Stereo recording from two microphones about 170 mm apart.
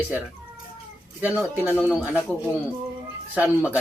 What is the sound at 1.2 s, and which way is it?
Speech, 10° right (ahead or behind).